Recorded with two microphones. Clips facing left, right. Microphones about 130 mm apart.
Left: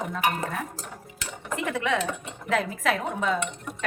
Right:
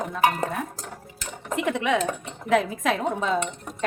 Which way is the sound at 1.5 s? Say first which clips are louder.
Right 3 dB; 20° right (ahead or behind).